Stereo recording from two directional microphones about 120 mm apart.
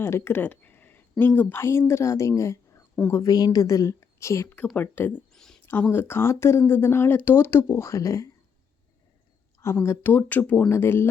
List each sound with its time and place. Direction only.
0.0 s speech: 20° left (ahead or behind)
5.3 s a sound: 5° left (ahead or behind)
5.6 s speech: 15° left (ahead or behind)
9.6 s speech: 20° left (ahead or behind)